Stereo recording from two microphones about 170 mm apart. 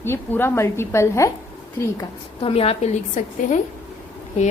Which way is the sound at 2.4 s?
35° left (ahead or behind).